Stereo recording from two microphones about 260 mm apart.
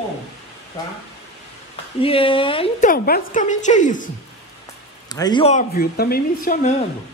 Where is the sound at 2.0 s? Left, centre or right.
Left.